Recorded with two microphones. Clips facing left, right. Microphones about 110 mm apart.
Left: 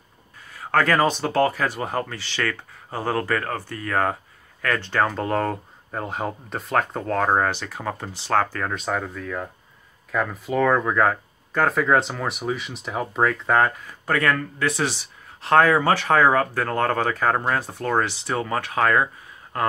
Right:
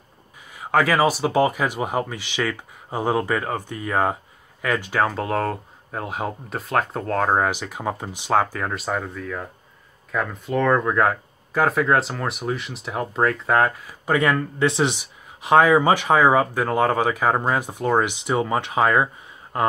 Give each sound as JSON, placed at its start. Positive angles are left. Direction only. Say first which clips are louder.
{"t": 0.5, "sound": "speech", "louder": "right 1 dB", "side_deg": -15}
{"t": 14.0, "sound": "speech", "louder": "right 2 dB", "side_deg": -15}